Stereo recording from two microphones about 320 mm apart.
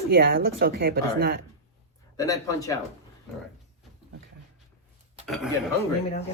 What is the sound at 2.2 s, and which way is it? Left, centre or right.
Speech, centre.